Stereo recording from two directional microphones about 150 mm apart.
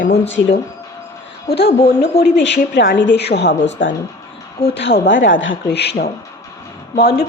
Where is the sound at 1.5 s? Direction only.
90° left.